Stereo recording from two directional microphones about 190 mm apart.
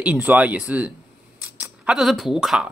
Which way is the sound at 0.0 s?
10° right (ahead or behind).